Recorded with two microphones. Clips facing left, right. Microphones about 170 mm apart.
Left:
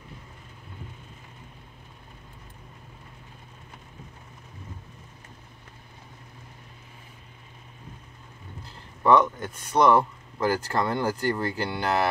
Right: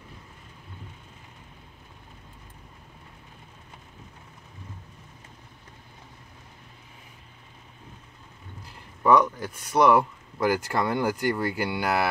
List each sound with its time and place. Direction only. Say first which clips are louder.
8.6 s speech: even; 10° right (ahead or behind)